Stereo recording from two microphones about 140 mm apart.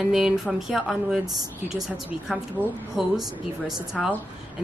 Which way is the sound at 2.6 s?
15° right (ahead or behind).